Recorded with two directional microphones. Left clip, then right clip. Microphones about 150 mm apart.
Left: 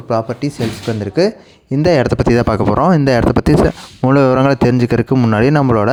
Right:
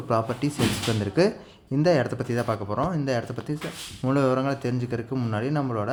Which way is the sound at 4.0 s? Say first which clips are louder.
Left 12 dB; 80° left.